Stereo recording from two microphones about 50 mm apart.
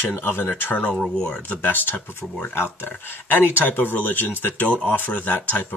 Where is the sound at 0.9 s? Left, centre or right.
Centre.